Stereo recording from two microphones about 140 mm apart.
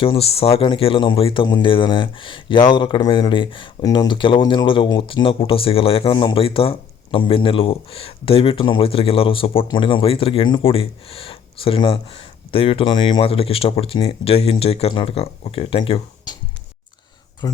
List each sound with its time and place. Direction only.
0.0 s speech: 40° left (ahead or behind)
17.4 s speech: 30° left (ahead or behind)